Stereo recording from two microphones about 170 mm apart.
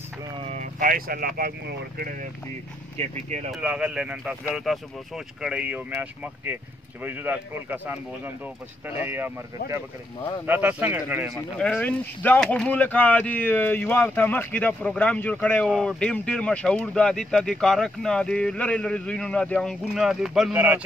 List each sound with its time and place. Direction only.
0.4 s speech: 40° right (ahead or behind); by 2.1 s 60° right (ahead or behind)
3.0 s speech: 40° right (ahead or behind)
3.5 s speech: 5° right (ahead or behind)
10.4 s speech: 10° right (ahead or behind)
11.3 s speech: 10° left (ahead or behind); by 20.8 s 10° right (ahead or behind)